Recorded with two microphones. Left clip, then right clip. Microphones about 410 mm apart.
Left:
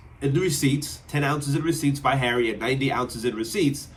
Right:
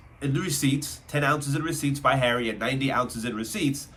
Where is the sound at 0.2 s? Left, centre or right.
Centre.